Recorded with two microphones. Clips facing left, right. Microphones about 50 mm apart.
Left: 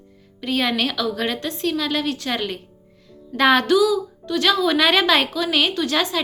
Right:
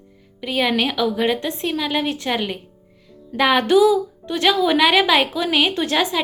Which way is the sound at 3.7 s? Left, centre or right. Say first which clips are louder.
Right 3 dB; right.